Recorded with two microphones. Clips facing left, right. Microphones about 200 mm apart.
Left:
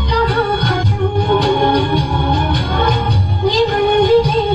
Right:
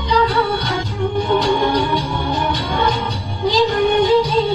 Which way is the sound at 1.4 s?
55° left (ahead or behind).